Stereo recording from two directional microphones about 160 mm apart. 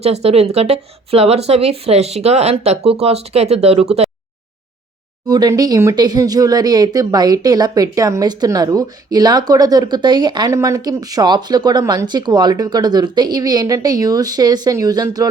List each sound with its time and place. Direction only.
0.0 s speech: 40° right (ahead or behind)
5.3 s speech: 25° right (ahead or behind)